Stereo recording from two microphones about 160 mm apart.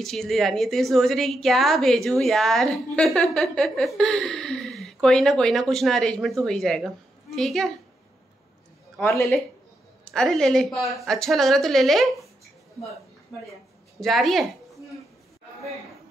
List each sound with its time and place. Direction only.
0.0 s a woman's voice: centre (ahead or behind)
9.0 s speech: 15° left (ahead or behind)
10.0 s a woman's voice: 5° left (ahead or behind)
13.3 s a woman's voice: centre (ahead or behind)